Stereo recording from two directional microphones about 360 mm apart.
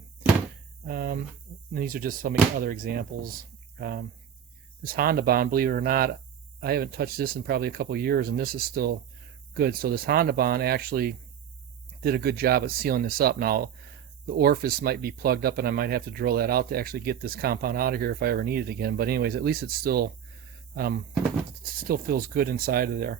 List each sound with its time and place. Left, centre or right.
0.9 s speech: right